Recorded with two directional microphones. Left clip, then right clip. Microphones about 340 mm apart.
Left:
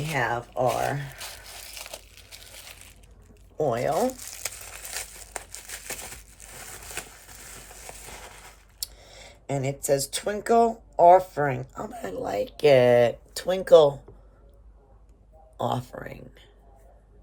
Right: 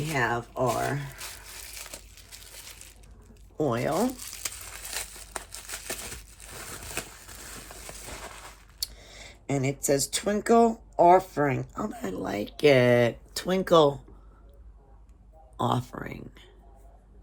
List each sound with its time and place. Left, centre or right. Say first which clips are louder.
0.1 s speech: left 1 dB; centre
3.6 s speech: left 3 dB; centre
4.5 s crumpling: even; centre
7.4 s a sound: right 2 dB; centre
8.8 s speech: right 2 dB; centre
15.5 s speech: even; centre